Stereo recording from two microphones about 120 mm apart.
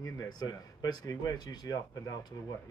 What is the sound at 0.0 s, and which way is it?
Speech, 30° left (ahead or behind).